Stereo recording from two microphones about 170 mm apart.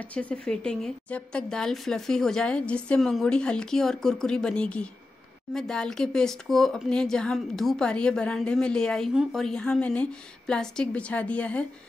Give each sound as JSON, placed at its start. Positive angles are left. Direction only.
{"t": 0.1, "sound": "speech", "side_deg": 10}